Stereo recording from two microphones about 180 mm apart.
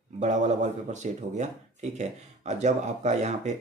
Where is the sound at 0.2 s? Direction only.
40° right (ahead or behind).